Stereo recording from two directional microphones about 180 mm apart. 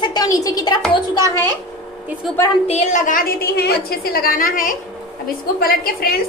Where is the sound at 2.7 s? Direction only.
40° left (ahead or behind).